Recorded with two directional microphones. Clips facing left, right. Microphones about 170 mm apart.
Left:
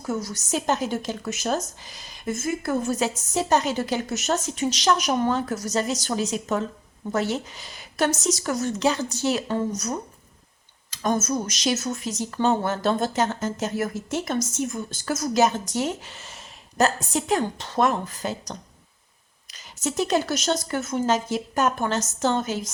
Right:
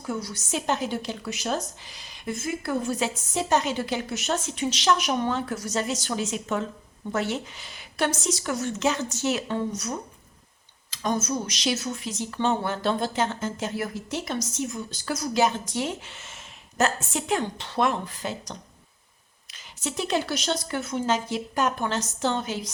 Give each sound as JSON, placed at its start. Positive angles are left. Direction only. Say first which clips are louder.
{"t": 0.1, "sound": "speech", "louder": "left 3 dB", "side_deg": 45}
{"t": 10.9, "sound": "speech", "louder": "left 3 dB", "side_deg": 50}